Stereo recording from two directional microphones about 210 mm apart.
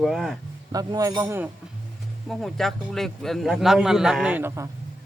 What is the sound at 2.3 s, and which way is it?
Speech, centre (ahead or behind).